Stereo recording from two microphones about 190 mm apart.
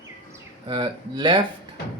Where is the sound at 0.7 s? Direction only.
25° right (ahead or behind).